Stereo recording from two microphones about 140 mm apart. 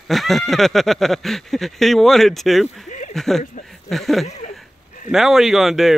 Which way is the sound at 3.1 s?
Centre (ahead or behind).